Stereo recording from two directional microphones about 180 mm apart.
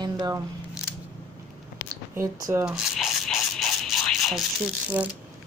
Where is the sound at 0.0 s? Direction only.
20° right (ahead or behind).